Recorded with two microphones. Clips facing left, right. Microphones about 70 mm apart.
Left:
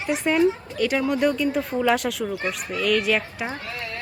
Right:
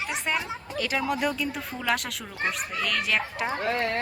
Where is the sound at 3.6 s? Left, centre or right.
Right.